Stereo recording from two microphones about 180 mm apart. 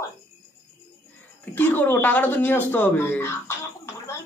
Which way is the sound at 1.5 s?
10° left (ahead or behind).